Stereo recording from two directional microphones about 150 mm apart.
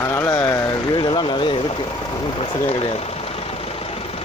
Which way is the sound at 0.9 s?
35° left (ahead or behind).